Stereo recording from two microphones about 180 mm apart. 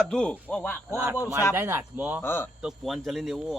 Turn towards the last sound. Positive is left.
turn(degrees=0)  # may be behind; listen again after turning